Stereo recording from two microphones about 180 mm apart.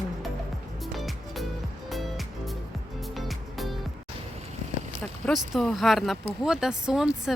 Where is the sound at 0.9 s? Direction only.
Centre (ahead or behind).